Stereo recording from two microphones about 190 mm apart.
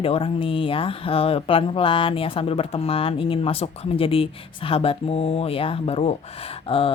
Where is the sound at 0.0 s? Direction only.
30° left (ahead or behind).